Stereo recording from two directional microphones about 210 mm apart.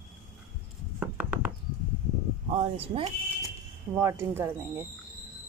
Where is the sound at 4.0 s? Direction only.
10° right (ahead or behind).